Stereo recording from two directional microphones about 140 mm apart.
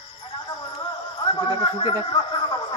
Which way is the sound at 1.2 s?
35° left (ahead or behind).